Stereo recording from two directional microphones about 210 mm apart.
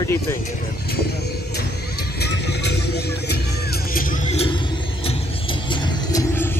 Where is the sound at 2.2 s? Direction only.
55° left (ahead or behind).